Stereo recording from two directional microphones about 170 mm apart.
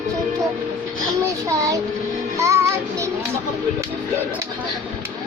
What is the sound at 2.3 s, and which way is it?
Music, 15° right (ahead or behind).